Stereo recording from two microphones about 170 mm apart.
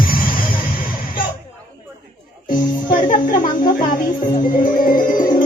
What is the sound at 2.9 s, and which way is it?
Music, 55° left (ahead or behind).